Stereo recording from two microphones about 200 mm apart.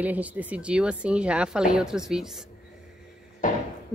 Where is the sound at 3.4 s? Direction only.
40° left (ahead or behind).